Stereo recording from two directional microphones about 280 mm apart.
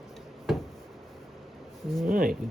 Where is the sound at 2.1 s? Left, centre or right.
Right.